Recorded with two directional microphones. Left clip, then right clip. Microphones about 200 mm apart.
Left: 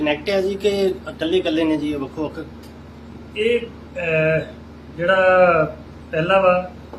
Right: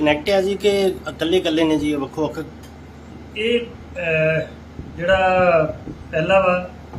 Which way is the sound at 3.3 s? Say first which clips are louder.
Left 1 dB; centre (ahead or behind).